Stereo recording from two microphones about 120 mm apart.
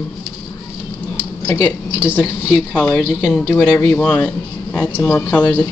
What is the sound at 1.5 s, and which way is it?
Speech, 30° left (ahead or behind).